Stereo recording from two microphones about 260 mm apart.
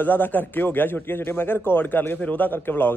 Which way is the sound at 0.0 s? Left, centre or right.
Centre.